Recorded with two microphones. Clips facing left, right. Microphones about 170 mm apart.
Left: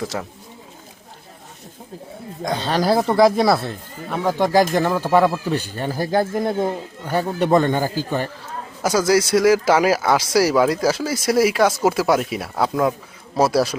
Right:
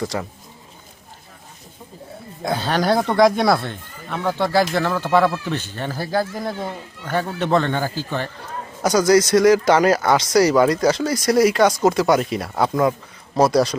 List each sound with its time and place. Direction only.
0.0 s speech: centre (ahead or behind)
2.4 s speech: 5° right (ahead or behind)